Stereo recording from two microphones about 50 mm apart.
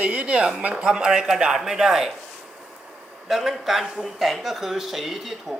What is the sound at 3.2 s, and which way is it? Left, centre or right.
Speech, centre.